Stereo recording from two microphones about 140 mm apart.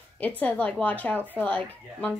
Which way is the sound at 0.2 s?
10° left (ahead or behind).